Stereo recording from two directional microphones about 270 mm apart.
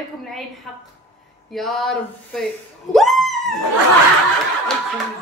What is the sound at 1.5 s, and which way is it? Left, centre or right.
Speech, centre.